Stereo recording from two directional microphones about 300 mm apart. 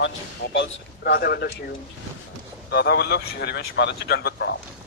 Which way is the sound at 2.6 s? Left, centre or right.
Left.